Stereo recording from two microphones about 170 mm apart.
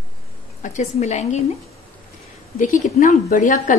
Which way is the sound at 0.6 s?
45° left (ahead or behind).